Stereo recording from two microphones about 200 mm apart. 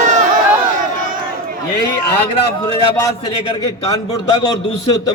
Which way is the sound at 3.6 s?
20° left (ahead or behind).